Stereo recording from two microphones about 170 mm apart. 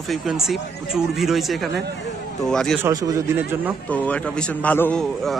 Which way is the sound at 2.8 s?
20° right (ahead or behind).